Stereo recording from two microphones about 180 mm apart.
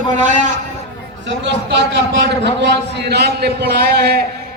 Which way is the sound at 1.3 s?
75° right (ahead or behind).